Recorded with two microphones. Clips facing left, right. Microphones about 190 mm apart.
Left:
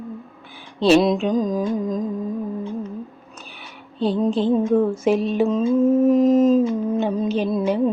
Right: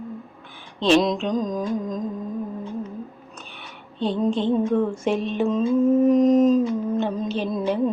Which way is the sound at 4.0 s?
5° left (ahead or behind).